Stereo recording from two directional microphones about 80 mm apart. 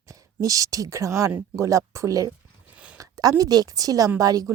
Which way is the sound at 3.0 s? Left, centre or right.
Right.